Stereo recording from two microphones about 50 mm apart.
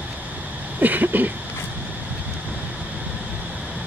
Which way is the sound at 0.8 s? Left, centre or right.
Right.